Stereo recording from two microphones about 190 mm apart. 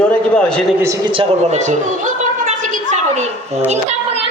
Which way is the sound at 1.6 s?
40° right (ahead or behind).